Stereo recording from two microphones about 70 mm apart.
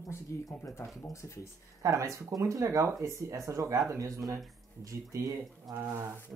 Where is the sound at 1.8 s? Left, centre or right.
Right.